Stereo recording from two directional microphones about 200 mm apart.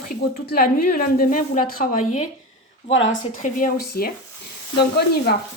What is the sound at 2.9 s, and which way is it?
Speech, 70° left (ahead or behind).